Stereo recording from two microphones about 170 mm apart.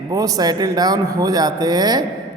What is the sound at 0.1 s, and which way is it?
A man's voice, 20° right (ahead or behind).